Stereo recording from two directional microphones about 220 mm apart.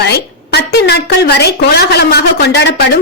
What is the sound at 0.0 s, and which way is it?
A woman's voice, 50° left (ahead or behind).